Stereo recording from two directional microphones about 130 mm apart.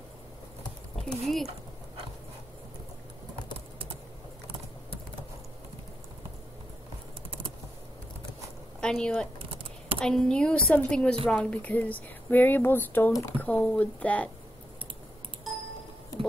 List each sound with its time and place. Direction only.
1.0 s speech: centre (ahead or behind)
8.8 s speech: 5° left (ahead or behind)
9.4 s typing: 45° right (ahead or behind)
9.9 s speech: 5° left (ahead or behind)